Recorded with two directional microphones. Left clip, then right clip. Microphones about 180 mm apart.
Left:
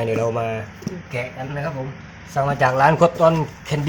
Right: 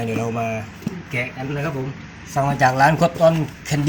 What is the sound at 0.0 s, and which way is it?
Speech, 25° left (ahead or behind).